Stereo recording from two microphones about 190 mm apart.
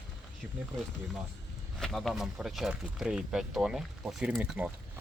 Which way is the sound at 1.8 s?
Centre (ahead or behind).